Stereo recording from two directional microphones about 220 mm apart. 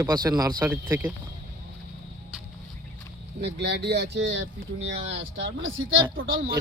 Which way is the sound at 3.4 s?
50° right (ahead or behind).